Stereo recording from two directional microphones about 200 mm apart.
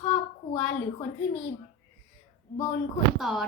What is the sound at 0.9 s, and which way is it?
Speech, 30° left (ahead or behind).